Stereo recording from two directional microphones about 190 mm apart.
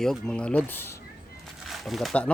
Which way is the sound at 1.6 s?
Centre (ahead or behind).